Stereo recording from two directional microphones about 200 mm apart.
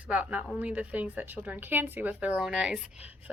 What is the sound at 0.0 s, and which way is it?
Speech, 5° right (ahead or behind).